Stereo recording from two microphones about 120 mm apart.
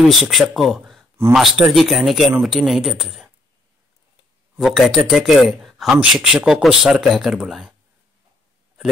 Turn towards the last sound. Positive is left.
turn(degrees=-5)  # may be behind; listen again after turning